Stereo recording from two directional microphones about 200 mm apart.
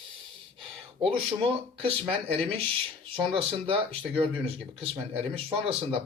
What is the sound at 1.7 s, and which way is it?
Speech, 30° right (ahead or behind).